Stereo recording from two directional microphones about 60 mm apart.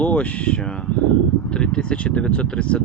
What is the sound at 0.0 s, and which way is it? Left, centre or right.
Speech, left.